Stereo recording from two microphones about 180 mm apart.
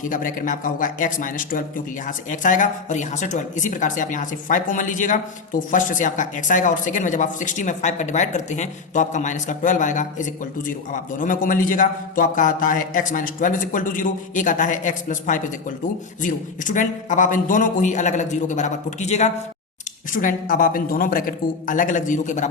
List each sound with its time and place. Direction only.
0.0 s a man's voice: 50° left (ahead or behind)
20.1 s speech: 50° left (ahead or behind)